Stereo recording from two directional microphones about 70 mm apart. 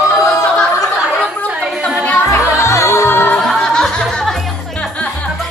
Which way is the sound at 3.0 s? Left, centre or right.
Left.